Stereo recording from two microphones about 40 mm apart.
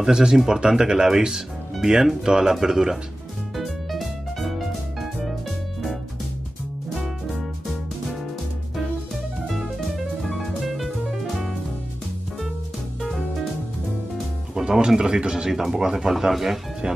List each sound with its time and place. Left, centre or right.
0.0 s speech: centre
3.5 s music: centre
9.8 s music: centre
14.5 s speech: centre
16.8 s speech: right